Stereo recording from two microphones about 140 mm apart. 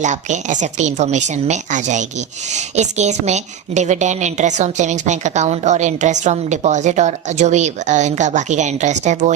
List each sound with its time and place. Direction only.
0.0 s speech: 60° right (ahead or behind)